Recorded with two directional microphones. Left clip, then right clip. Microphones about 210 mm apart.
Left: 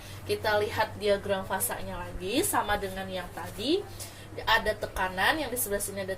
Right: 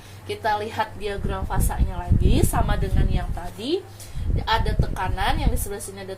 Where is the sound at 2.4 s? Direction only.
30° right (ahead or behind).